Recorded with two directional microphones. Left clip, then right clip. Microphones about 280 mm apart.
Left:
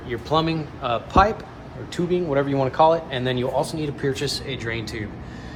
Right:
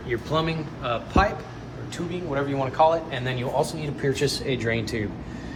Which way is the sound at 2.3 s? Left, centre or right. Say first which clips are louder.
Left 4 dB; centre.